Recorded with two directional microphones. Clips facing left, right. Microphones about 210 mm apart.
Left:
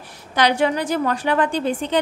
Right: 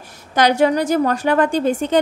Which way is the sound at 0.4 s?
40° right (ahead or behind).